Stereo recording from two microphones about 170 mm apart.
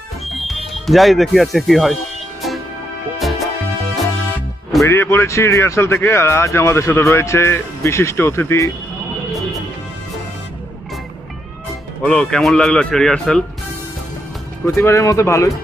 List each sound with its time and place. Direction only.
0.3 s speech: centre (ahead or behind)
3.2 s music: centre (ahead or behind)
4.8 s speech: 15° left (ahead or behind)
12.0 s speech: 5° left (ahead or behind)
14.6 s speech: 15° left (ahead or behind)